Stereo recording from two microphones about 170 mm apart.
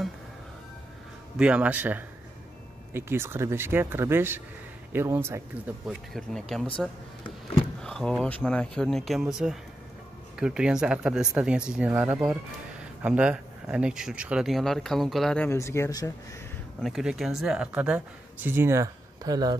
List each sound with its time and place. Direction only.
1.4 s speech: 10° right (ahead or behind)
5.9 s speech: centre (ahead or behind)
7.8 s speech: centre (ahead or behind); by 16.1 s 20° left (ahead or behind)
16.8 s speech: centre (ahead or behind); by 19.5 s 20° right (ahead or behind)